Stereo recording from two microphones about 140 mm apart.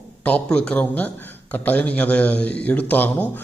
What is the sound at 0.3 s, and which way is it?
A man's voice, 5° left (ahead or behind).